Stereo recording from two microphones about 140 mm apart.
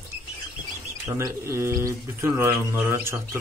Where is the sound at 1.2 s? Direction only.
20° right (ahead or behind).